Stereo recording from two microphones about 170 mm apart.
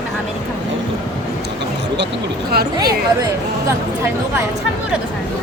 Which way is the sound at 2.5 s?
65° right (ahead or behind).